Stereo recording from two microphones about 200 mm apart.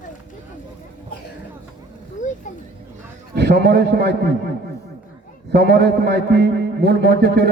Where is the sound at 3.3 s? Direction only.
50° right (ahead or behind).